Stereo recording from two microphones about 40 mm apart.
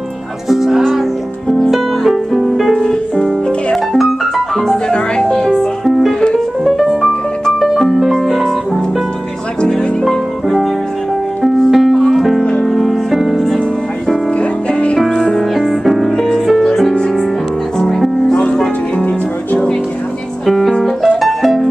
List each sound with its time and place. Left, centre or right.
0.5 s music: centre
4.8 s music: left
5.5 s music: centre
9.6 s music: left
10.0 s music: centre
14.4 s music: left
15.0 s music: centre
16.1 s music: centre
18.3 s music: left
19.0 s music: left
20.4 s music: centre